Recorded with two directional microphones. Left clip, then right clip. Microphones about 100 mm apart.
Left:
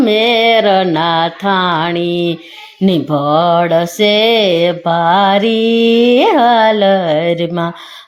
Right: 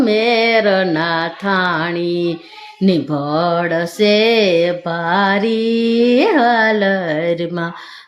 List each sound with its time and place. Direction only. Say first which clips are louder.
0.0 s music: left 3 dB; 30° left (ahead or behind)
0.6 s mantra: left 4 dB; 25° left (ahead or behind)
2.0 s a sound: left 3 dB; 40° right (ahead or behind)
2.8 s mantra: left 4 dB; 25° left (ahead or behind)
5.8 s a sound: left 5 dB; 35° right (ahead or behind)
6.1 s mantra: left 2 dB; 30° left (ahead or behind)